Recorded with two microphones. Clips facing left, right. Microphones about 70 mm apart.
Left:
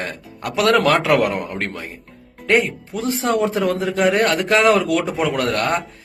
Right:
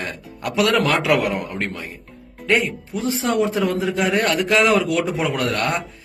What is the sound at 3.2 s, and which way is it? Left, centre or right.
A man's voice, left.